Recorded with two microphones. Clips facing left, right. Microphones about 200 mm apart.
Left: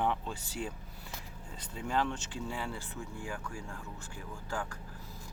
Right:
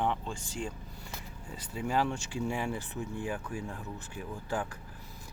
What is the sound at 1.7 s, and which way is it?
Speech, 10° right (ahead or behind).